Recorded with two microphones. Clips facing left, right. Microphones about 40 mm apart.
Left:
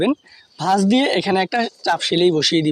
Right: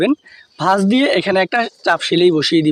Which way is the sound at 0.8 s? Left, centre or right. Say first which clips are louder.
Right 1 dB; right.